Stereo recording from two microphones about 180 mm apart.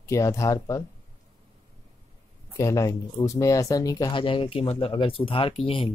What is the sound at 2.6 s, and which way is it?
Speech, 15° left (ahead or behind).